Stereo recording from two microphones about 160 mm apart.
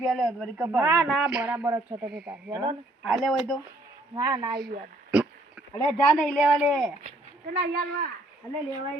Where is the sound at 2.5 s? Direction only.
25° right (ahead or behind).